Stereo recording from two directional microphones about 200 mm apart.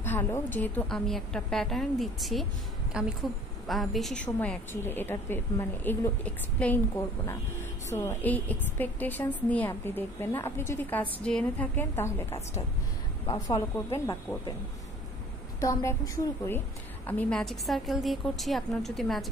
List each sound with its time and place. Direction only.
0.0 s a woman's voice: 10° left (ahead or behind)
7.9 s a woman's voice: 15° left (ahead or behind)
15.6 s a woman's voice: 15° left (ahead or behind)